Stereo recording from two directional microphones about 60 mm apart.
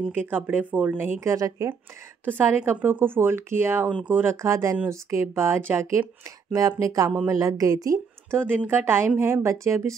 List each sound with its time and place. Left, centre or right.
0.1 s speech: right
1.2 s a woman's voice: right
2.2 s speech: right
4.4 s a woman's voice: right
6.5 s a woman's voice: right
8.3 s a woman's voice: right